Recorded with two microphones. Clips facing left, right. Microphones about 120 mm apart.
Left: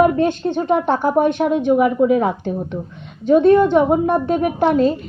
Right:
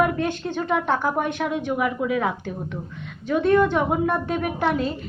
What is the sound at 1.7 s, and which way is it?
A woman's voice, 35° left (ahead or behind).